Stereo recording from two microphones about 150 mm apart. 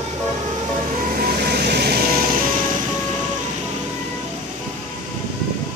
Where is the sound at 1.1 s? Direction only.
85° right.